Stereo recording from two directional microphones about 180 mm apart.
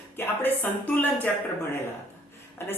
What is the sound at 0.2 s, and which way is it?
Speech, 10° left (ahead or behind).